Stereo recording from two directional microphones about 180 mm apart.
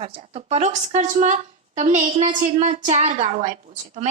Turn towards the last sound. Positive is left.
turn(degrees=-40)  # may be behind; listen again after turning